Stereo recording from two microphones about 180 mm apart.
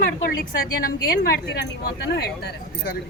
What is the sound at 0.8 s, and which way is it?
Speech, 55° left (ahead or behind).